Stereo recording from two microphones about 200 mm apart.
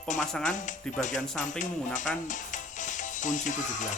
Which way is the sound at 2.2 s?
40° left (ahead or behind).